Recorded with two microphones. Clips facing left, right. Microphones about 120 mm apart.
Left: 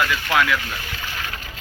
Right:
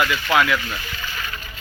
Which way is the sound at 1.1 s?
75° left (ahead or behind).